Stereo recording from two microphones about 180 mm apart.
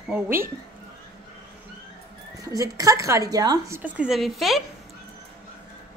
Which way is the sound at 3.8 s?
10° right (ahead or behind).